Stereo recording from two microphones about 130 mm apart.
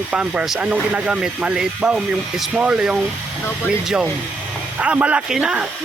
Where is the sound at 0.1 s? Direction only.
10° right (ahead or behind).